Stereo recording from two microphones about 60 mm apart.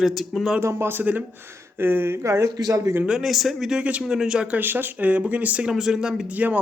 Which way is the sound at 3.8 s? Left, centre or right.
Centre.